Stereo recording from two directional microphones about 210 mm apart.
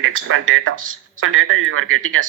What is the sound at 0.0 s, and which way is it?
Speech, 80° right.